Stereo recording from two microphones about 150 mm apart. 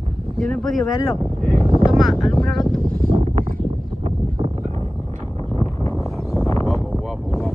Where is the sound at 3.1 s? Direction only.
45° right (ahead or behind).